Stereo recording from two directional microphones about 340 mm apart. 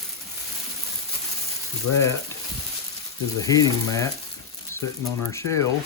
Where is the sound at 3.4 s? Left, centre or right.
Centre.